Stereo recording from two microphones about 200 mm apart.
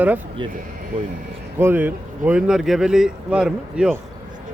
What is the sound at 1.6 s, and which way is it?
Speech, 10° right (ahead or behind).